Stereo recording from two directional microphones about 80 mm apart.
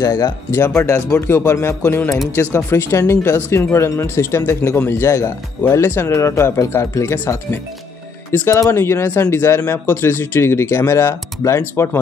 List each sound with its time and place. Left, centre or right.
0.0 s speech: left